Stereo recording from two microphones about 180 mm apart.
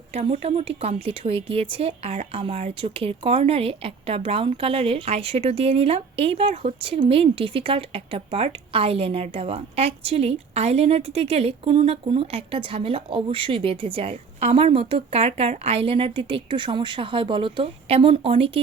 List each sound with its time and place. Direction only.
0.1 s speech: 35° right (ahead or behind)